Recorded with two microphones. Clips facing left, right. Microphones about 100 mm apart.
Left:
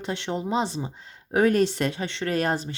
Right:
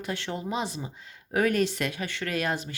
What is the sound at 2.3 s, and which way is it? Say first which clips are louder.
Speech: left 5 dB; 35° left (ahead or behind).